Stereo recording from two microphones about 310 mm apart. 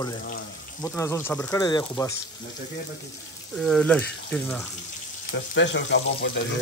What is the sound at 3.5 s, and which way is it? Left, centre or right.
Speech, centre.